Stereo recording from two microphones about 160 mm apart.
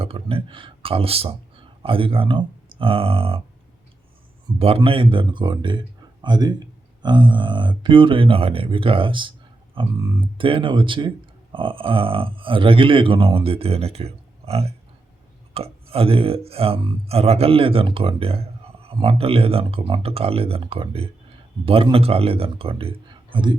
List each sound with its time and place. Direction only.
0.0 s speech: 35° right (ahead or behind)
4.4 s speech: 30° right (ahead or behind)